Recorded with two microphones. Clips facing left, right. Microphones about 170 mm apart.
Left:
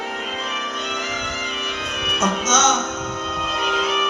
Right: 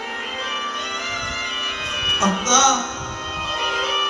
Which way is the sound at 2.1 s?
10° right (ahead or behind).